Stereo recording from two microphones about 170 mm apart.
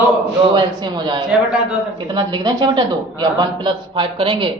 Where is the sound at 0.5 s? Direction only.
25° right (ahead or behind).